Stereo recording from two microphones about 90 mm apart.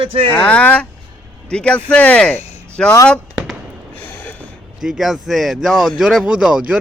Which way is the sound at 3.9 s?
20° left (ahead or behind).